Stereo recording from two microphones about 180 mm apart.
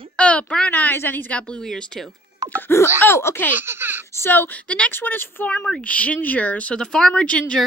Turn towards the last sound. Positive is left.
turn(degrees=5)  # may be behind; listen again after turning